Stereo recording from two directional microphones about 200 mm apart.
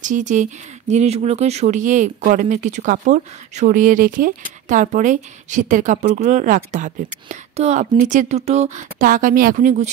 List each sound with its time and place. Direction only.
0.0 s speech: 40° right (ahead or behind)